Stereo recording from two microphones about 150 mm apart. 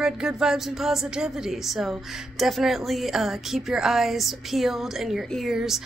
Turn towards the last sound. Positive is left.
turn(degrees=0)  # may be behind; listen again after turning